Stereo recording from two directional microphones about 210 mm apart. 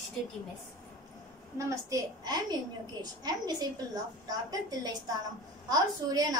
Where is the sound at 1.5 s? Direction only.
15° right (ahead or behind).